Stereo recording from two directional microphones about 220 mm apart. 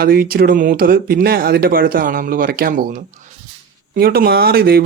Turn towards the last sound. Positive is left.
turn(degrees=-45)  # may be behind; listen again after turning